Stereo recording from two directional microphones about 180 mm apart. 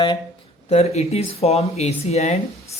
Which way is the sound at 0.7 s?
35° left (ahead or behind).